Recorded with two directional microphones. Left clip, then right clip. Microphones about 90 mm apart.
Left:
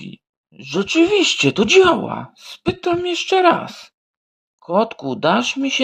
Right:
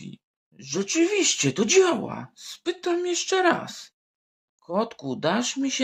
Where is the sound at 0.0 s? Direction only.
30° left (ahead or behind).